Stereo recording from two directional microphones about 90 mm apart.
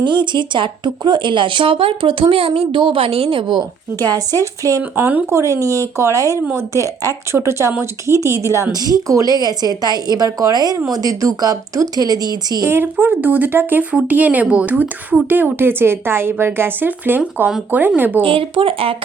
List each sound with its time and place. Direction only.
0.0 s speech: 60° right (ahead or behind); by 4.8 s 40° right (ahead or behind)
4.9 s speech: 20° right (ahead or behind)
5.2 s speech: 35° right (ahead or behind)
12.6 s speech: 25° right (ahead or behind)
18.2 s speech: 80° right